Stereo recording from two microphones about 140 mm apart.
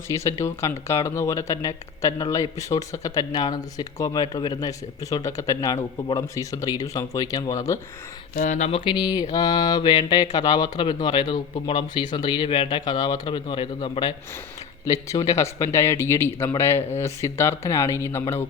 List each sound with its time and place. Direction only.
0.1 s speech: 20° left (ahead or behind)
8.4 s speech: 60° left (ahead or behind)
8.8 s speech: 30° left (ahead or behind)
15.1 s speech: 25° left (ahead or behind)